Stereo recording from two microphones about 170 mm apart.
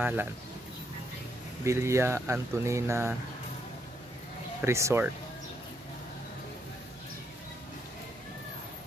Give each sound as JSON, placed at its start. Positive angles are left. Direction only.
{"t": 0.0, "sound": "speech", "side_deg": -10}
{"t": 1.6, "sound": "speech", "side_deg": -15}
{"t": 4.6, "sound": "speech", "side_deg": -15}